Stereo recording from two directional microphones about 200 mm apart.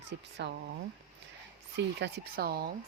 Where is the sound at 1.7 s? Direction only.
55° right (ahead or behind).